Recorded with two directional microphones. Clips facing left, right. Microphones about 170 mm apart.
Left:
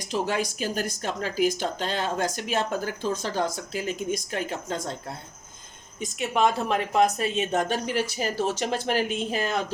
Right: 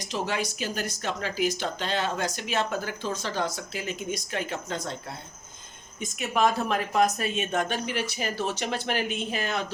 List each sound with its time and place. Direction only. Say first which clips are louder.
0.1 s speech: left 3 dB; 40° left (ahead or behind)
6.0 s speech: left 1 dB; 25° left (ahead or behind); by 9.7 s 40° left (ahead or behind)